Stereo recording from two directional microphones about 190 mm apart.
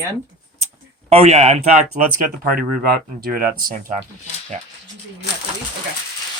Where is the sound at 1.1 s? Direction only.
30° right (ahead or behind); by 3.7 s 50° right (ahead or behind).